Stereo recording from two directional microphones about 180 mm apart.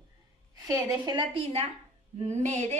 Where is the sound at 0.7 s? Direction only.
20° right (ahead or behind).